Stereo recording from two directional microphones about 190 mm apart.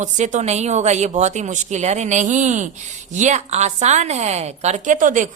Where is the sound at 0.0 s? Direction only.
40° right (ahead or behind).